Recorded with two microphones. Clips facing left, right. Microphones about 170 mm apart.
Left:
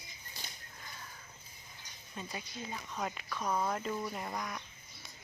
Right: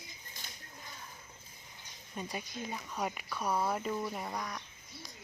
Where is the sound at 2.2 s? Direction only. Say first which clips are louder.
Right 3 dB; 15° right (ahead or behind).